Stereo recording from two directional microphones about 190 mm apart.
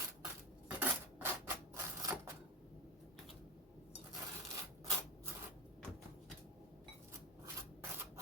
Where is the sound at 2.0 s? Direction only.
15° right (ahead or behind).